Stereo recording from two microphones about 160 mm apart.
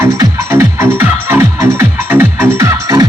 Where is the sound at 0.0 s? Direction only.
20° right (ahead or behind).